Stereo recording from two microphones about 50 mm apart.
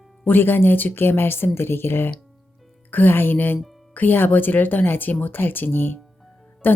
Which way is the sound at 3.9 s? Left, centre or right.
Left.